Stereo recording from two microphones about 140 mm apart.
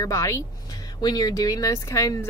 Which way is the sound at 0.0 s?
20° left (ahead or behind).